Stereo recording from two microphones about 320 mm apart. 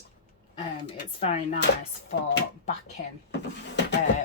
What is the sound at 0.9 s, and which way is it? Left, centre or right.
Speech, left.